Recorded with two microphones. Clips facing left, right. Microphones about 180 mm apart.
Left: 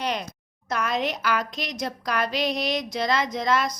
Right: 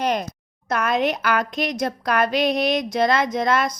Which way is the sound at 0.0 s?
45° right (ahead or behind).